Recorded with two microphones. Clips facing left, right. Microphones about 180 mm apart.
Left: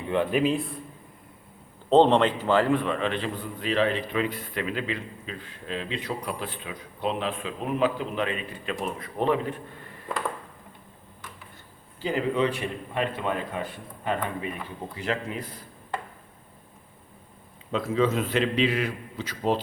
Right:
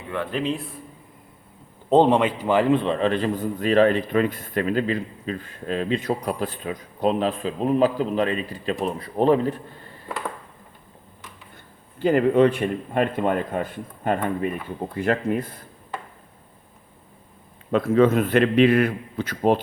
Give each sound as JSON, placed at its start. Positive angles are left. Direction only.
{"t": 0.1, "sound": "speech", "side_deg": 15}
{"t": 1.9, "sound": "a man's voice", "side_deg": -10}
{"t": 11.9, "sound": "a man's voice", "side_deg": -55}
{"t": 17.7, "sound": "a man's voice", "side_deg": -55}